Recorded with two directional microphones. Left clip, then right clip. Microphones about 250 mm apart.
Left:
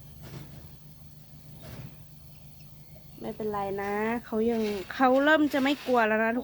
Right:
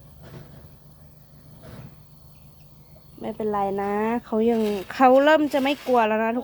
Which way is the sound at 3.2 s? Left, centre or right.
Right.